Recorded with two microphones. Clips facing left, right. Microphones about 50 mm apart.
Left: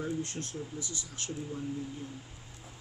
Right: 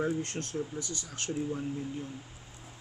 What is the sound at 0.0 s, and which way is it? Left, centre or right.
Speech, right.